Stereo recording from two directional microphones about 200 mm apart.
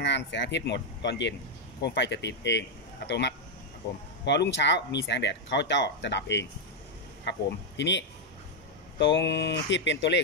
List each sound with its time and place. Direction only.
0.0 s speech: 60° left (ahead or behind)